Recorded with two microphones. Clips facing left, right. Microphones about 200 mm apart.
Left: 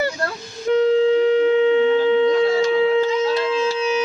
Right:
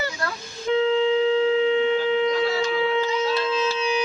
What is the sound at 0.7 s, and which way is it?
Wind instrument, 45° left (ahead or behind).